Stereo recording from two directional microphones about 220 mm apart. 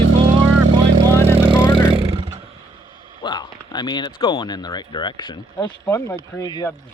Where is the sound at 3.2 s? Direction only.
20° left (ahead or behind).